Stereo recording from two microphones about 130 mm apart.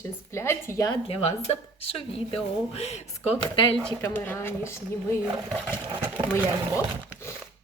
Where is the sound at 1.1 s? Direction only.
55° left (ahead or behind).